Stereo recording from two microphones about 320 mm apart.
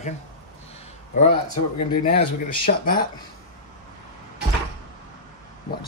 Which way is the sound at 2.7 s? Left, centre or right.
Left.